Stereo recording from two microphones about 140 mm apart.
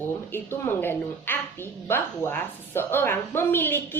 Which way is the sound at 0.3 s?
15° left (ahead or behind).